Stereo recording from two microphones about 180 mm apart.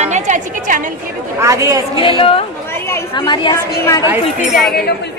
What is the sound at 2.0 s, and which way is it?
A woman's voice, 30° left (ahead or behind).